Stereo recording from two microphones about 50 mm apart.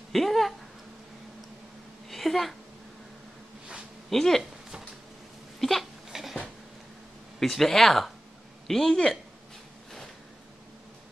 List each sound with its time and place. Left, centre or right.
0.1 s speech: centre
2.0 s a sound: centre
4.1 s a woman's voice: centre
5.6 s hiccup: centre
7.3 s a woman's voice: centre